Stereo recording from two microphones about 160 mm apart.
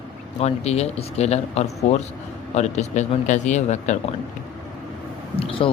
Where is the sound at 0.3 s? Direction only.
40° left (ahead or behind).